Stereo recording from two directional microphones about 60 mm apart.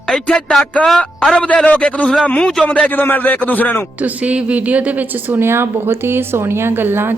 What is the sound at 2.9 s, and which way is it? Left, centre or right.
Speech, left.